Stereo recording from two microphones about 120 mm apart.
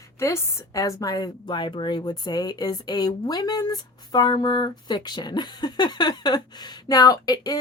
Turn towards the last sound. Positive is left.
turn(degrees=30)  # may be behind; listen again after turning